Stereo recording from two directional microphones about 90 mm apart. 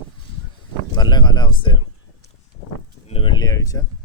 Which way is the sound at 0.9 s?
55° left (ahead or behind).